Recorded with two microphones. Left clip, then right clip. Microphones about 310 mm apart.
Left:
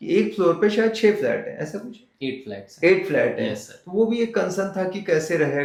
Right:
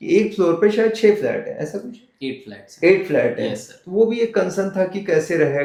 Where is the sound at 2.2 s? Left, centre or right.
Left.